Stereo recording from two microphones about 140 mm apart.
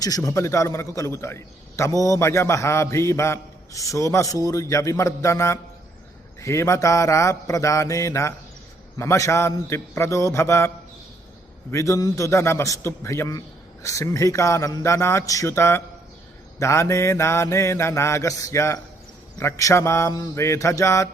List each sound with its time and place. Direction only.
0.0 s a man's voice: 25° left (ahead or behind)
11.7 s a man's voice: 20° left (ahead or behind)